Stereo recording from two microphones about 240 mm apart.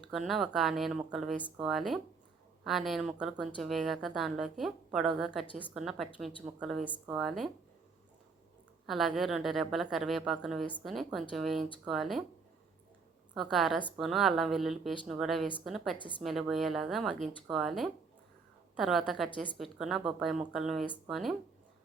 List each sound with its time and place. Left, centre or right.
0.1 s speech: centre
8.9 s speech: centre
13.3 s speech: centre
16.0 s speech: left
16.2 s speech: centre